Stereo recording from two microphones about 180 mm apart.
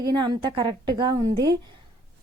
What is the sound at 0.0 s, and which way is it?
Speech, 20° right (ahead or behind).